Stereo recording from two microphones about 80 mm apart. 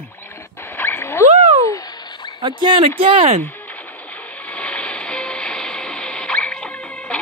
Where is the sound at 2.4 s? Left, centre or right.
Right.